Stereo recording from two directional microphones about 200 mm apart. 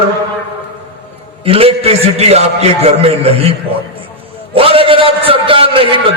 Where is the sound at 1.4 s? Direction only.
30° right (ahead or behind).